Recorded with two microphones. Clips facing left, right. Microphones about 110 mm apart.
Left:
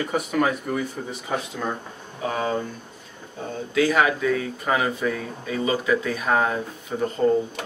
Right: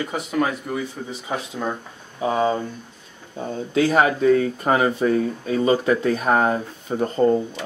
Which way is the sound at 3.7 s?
35° right (ahead or behind).